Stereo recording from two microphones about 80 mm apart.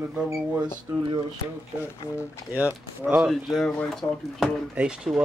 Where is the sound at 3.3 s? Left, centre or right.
Centre.